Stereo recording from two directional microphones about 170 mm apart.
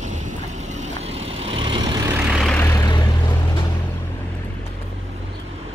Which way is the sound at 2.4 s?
10° left (ahead or behind).